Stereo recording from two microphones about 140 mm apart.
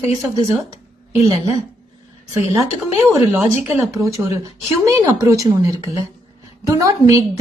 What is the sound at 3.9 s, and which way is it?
A woman's voice, 20° right (ahead or behind).